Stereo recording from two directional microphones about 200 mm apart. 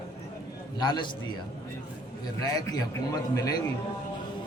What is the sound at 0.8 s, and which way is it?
Speech, 20° left (ahead or behind).